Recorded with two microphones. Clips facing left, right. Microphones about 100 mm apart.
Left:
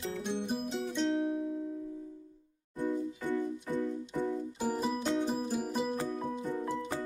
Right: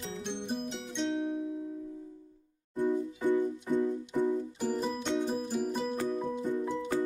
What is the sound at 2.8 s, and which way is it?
Music, 15° right (ahead or behind).